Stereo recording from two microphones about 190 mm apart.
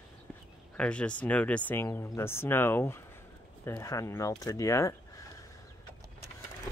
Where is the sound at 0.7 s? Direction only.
5° left (ahead or behind).